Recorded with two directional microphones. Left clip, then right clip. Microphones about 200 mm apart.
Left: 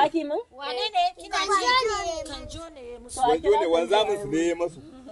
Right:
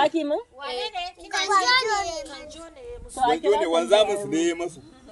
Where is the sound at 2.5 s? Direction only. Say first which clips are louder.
Even; 55° left (ahead or behind).